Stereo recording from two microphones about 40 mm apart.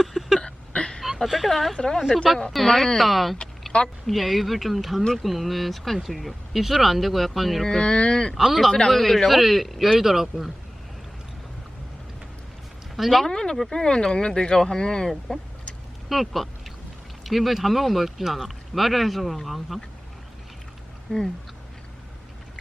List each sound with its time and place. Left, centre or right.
0.0 s a sound: centre
0.3 s a sound: left
1.2 s speech: centre
1.7 s speech: centre
2.0 s speech: centre
7.6 s speech: left
8.4 s speech: centre
13.0 s speech: centre
13.2 s speech: centre
16.0 s speech: centre
21.1 s speech: left